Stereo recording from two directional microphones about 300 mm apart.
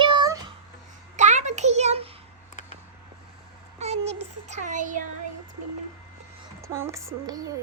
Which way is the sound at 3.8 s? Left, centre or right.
Right.